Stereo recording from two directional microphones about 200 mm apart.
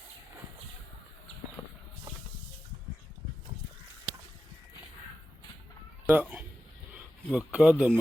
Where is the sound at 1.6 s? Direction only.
20° left (ahead or behind).